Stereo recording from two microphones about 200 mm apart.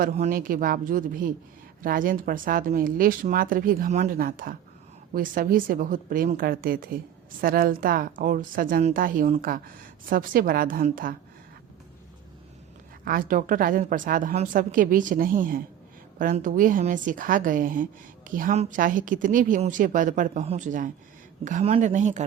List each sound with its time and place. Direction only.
0.0 s speech: 45° right (ahead or behind)
13.1 s a woman's voice: 45° right (ahead or behind)